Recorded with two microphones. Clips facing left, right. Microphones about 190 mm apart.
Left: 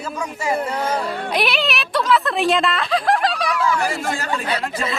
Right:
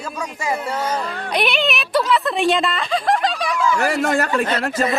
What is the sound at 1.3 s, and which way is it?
A woman's voice, centre (ahead or behind).